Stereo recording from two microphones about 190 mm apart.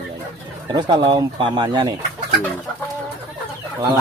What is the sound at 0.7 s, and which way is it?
Speech, 20° right (ahead or behind).